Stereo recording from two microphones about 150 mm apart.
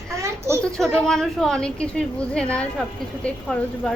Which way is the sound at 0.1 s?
20° right (ahead or behind).